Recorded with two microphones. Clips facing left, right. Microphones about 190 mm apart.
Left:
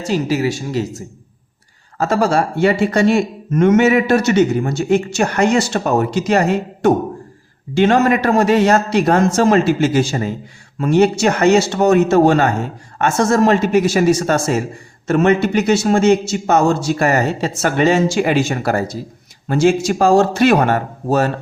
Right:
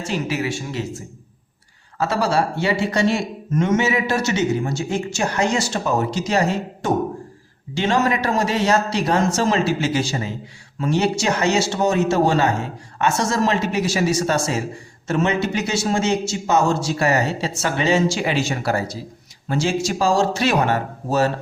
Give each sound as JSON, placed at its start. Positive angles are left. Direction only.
{"t": 0.0, "sound": "a man's voice", "side_deg": 35}